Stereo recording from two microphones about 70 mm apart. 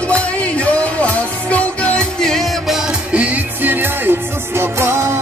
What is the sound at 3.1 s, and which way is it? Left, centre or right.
Music, right.